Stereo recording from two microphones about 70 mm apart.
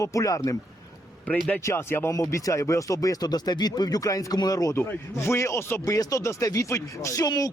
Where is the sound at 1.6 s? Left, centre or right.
Left.